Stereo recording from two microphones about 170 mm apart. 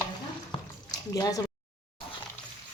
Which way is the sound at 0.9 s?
20° left (ahead or behind).